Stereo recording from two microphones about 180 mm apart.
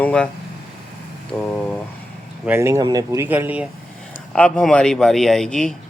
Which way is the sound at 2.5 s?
15° right (ahead or behind).